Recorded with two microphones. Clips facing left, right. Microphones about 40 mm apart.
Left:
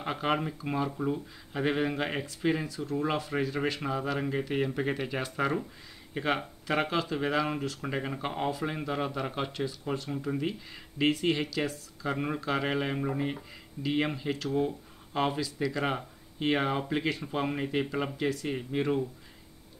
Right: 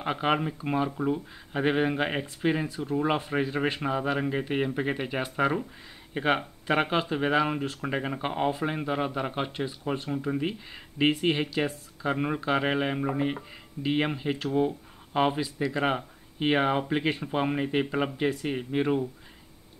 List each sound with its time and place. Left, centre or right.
0.0 s speech: right